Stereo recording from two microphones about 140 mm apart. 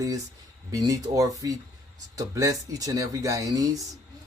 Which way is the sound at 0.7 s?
25° right (ahead or behind).